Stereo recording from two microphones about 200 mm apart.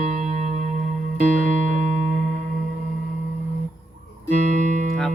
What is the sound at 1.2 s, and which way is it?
Music, 40° right (ahead or behind).